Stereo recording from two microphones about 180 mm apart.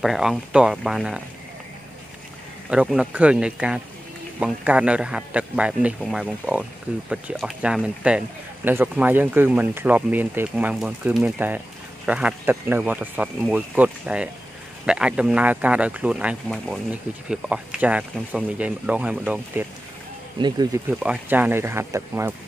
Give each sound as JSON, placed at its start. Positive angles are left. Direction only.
{"t": 0.0, "sound": "speech", "side_deg": 0}
{"t": 2.7, "sound": "speech", "side_deg": -5}
{"t": 20.3, "sound": "speech", "side_deg": -25}
{"t": 20.9, "sound": "speech", "side_deg": -5}